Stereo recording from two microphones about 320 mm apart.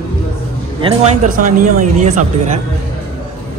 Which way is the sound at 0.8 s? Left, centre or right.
Right.